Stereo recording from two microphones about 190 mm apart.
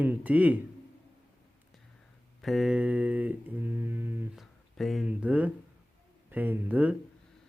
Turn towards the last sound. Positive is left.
turn(degrees=-10)  # may be behind; listen again after turning